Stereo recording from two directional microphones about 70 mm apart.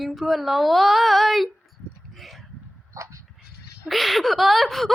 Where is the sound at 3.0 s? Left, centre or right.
Right.